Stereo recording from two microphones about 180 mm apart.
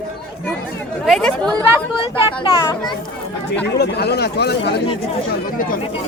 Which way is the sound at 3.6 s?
65° left (ahead or behind).